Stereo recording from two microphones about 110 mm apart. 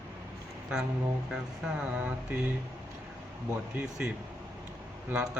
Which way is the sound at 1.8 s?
10° right (ahead or behind).